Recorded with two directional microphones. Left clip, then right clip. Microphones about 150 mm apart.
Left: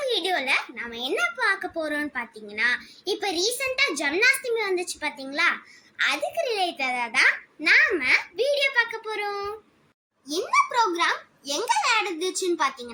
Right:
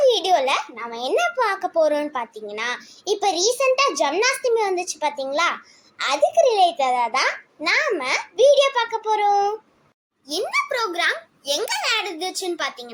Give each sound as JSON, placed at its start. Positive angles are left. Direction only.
{"t": 0.1, "sound": "a child's voice", "side_deg": -20}
{"t": 10.2, "sound": "a child's voice", "side_deg": -30}